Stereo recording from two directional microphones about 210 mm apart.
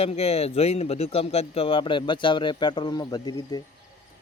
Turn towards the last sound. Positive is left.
turn(degrees=20)  # may be behind; listen again after turning